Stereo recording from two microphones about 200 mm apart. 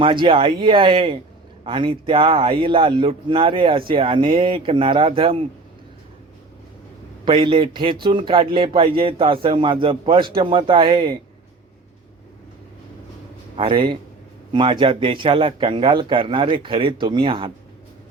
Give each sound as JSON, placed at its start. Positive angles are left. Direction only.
{"t": 0.0, "sound": "a man's voice", "side_deg": -25}
{"t": 7.3, "sound": "speech", "side_deg": -25}
{"t": 13.6, "sound": "speech", "side_deg": -25}